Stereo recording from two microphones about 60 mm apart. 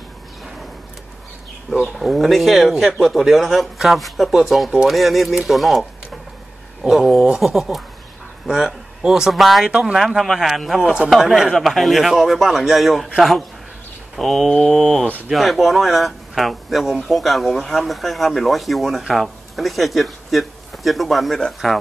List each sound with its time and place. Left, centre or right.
2.0 s speech: centre
9.7 s speech: centre
9.9 s speech: centre
14.1 s speech: centre